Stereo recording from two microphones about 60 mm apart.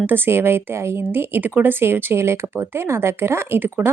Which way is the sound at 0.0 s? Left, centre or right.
Right.